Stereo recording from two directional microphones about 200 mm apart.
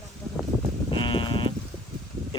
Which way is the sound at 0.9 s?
25° left (ahead or behind).